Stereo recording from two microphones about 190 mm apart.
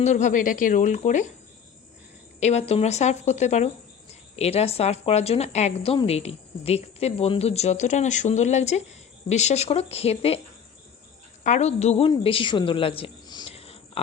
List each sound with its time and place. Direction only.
0.0 s a woman's voice: 40° left (ahead or behind)
2.4 s a woman's voice: 35° left (ahead or behind)
11.4 s a woman's voice: 35° left (ahead or behind)
12.1 s a sound: 30° left (ahead or behind)